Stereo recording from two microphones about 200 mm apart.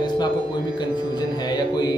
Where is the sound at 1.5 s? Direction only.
20° left (ahead or behind).